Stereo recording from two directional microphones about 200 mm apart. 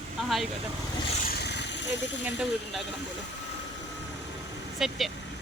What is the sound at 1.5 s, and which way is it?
Vehicle, 60° left (ahead or behind).